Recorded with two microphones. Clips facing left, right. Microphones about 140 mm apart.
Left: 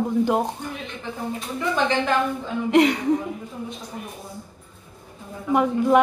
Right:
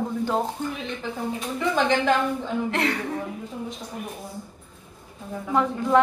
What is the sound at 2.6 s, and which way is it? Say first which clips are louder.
Speech: left 13 dB; 15° left (ahead or behind).